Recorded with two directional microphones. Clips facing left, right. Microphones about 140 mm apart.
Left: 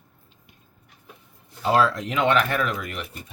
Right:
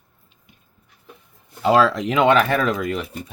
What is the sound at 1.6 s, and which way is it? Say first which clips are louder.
Speech: right 4 dB; 90° right.